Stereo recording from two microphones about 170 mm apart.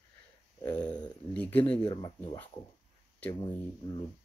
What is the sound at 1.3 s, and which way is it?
Speech, 10° left (ahead or behind).